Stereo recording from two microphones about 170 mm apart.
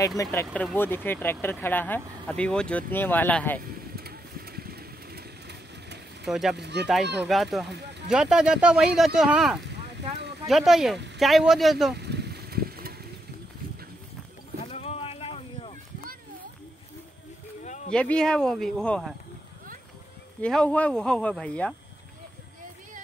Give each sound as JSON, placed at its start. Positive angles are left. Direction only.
{"t": 0.2, "sound": "speech", "side_deg": 15}
{"t": 3.9, "sound": "vehicle", "side_deg": -65}
{"t": 6.2, "sound": "speech", "side_deg": -5}
{"t": 6.5, "sound": "speech", "side_deg": -80}
{"t": 7.3, "sound": "speech", "side_deg": 0}
{"t": 11.9, "sound": "vehicle", "side_deg": -75}
{"t": 14.6, "sound": "boat", "side_deg": 40}
{"t": 17.6, "sound": "a sound", "side_deg": 45}
{"t": 17.9, "sound": "speech", "side_deg": 5}
{"t": 20.4, "sound": "speech", "side_deg": 5}